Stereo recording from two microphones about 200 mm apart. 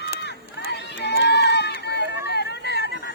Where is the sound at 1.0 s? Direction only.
60° left (ahead or behind).